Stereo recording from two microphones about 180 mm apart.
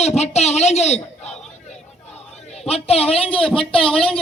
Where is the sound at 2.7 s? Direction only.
35° left (ahead or behind).